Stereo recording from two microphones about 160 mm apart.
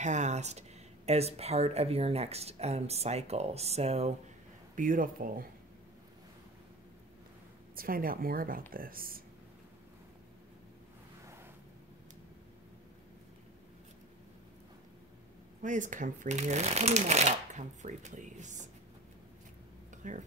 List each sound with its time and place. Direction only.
0.0 s speech: 45° right (ahead or behind)
4.7 s speech: 55° right (ahead or behind)
7.7 s speech: 65° right (ahead or behind)
15.6 s speech: 50° right (ahead or behind)
20.0 s speech: 50° right (ahead or behind)